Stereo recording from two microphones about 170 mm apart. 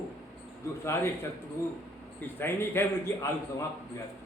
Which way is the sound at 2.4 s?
15° left (ahead or behind).